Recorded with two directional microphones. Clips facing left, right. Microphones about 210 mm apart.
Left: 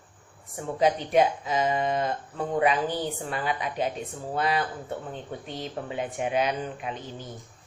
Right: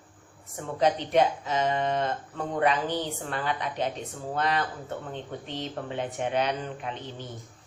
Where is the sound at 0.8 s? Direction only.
10° left (ahead or behind).